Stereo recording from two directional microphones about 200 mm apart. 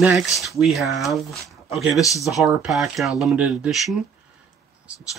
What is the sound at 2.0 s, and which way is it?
Speech, 15° left (ahead or behind).